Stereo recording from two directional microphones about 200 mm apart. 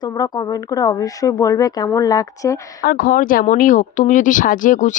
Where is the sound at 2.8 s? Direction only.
45° left (ahead or behind).